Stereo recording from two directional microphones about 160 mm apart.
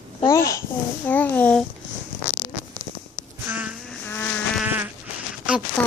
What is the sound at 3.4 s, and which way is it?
Insect, 10° right (ahead or behind).